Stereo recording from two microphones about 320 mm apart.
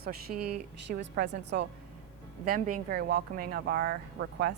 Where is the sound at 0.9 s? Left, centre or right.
Right.